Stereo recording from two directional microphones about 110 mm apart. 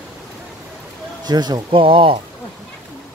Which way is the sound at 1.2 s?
40° right (ahead or behind).